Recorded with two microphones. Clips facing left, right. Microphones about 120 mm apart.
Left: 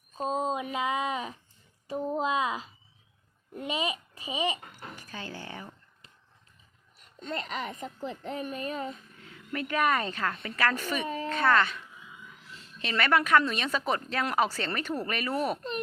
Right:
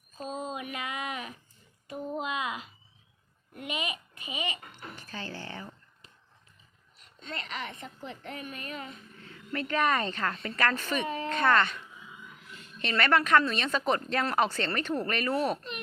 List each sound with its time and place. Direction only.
0.1 s a sound: 25° left (ahead or behind)
1.9 s a child's voice: 30° left (ahead or behind)
4.7 s speech: 10° left (ahead or behind)
7.2 s speech: 40° left (ahead or behind)
9.3 s a woman's voice: 10° left (ahead or behind)
12.8 s a woman's voice: 5° left (ahead or behind)